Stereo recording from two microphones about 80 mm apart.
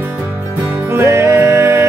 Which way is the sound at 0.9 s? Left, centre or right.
Right.